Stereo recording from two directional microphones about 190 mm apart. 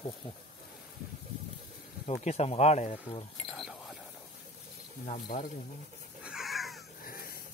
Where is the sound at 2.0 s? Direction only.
35° left (ahead or behind).